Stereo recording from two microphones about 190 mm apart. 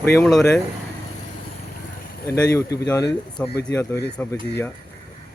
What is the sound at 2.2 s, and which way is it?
Speech, 15° left (ahead or behind).